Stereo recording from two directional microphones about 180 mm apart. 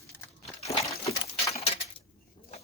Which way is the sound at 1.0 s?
35° left (ahead or behind).